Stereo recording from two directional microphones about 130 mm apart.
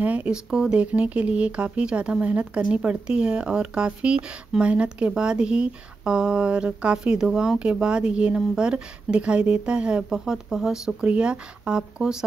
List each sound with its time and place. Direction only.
0.0 s speech: 10° right (ahead or behind)